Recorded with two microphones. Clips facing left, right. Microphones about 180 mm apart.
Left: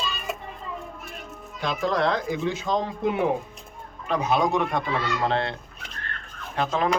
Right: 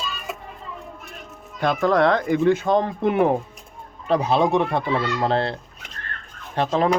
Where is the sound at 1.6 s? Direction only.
55° right (ahead or behind).